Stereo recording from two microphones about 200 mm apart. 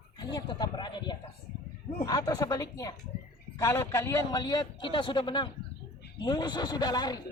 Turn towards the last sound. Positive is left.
turn(degrees=20)  # may be behind; listen again after turning